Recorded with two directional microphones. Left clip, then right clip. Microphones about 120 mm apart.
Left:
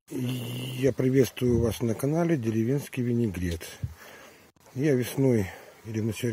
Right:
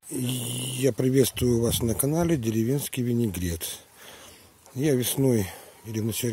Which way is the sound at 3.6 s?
30° right (ahead or behind).